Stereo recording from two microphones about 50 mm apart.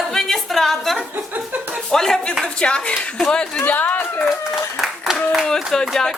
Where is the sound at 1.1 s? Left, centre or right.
Right.